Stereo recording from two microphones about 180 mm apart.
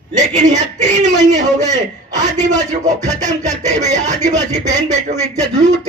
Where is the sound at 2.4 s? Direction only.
40° right (ahead or behind).